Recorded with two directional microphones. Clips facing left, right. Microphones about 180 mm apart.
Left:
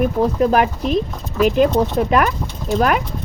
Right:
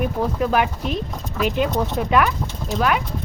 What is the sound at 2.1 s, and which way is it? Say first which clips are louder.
Speech: left 2 dB; 45° left (ahead or behind).